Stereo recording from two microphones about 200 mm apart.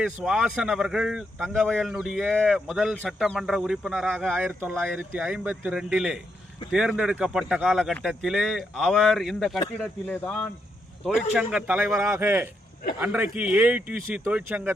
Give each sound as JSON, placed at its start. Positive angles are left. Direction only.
{"t": 0.0, "sound": "speech", "side_deg": -5}